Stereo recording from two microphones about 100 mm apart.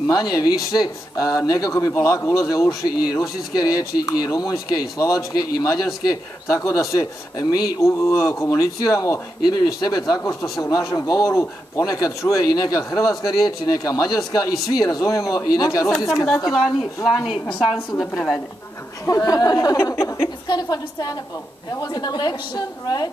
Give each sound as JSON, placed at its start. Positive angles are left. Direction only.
{"t": 0.0, "sound": "speech", "side_deg": 40}
{"t": 6.4, "sound": "speech", "side_deg": 30}
{"t": 13.0, "sound": "a woman's voice", "side_deg": 0}
{"t": 13.3, "sound": "speech", "side_deg": 40}
{"t": 17.0, "sound": "a woman's voice", "side_deg": 0}
{"t": 17.5, "sound": "a woman's voice", "side_deg": 65}
{"t": 19.0, "sound": "speech", "side_deg": 35}
{"t": 20.4, "sound": "a woman's voice", "side_deg": 45}